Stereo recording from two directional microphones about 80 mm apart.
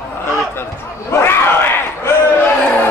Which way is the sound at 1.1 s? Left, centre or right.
Left.